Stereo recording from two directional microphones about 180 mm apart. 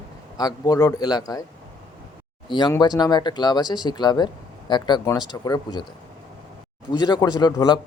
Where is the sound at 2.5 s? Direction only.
25° left (ahead or behind).